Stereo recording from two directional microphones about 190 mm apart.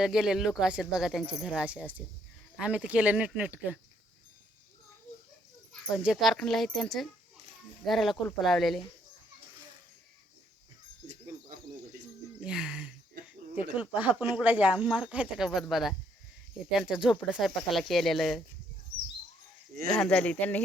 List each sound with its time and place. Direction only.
0.0 s speech: 5° right (ahead or behind)
5.7 s speech: 5° right (ahead or behind)
11.0 s cricket: 40° right (ahead or behind)
12.4 s a sound: 5° right (ahead or behind)
13.9 s speech: 10° right (ahead or behind)
19.9 s speech: 5° left (ahead or behind)